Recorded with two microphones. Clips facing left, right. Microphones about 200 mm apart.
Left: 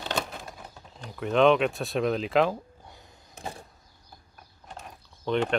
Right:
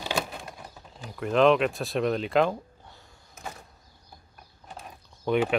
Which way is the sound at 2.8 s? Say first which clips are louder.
Left 2 dB; 15° left (ahead or behind).